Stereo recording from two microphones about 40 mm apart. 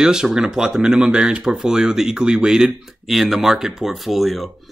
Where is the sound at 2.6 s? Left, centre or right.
Centre.